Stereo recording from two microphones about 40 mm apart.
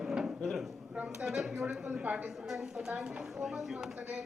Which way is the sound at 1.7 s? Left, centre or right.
Centre.